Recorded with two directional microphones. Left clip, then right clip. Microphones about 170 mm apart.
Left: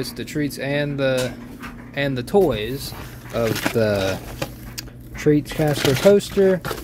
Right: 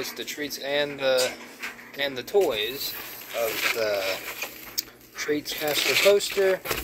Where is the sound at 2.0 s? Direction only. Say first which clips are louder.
Left 5 dB; 35° left (ahead or behind).